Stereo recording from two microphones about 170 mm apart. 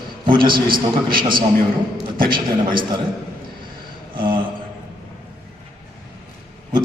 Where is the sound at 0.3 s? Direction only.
30° right (ahead or behind).